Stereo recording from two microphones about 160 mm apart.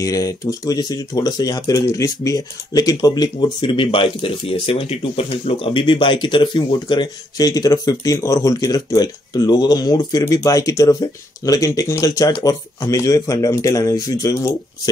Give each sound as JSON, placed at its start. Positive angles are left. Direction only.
{"t": 0.0, "sound": "speech", "side_deg": 20}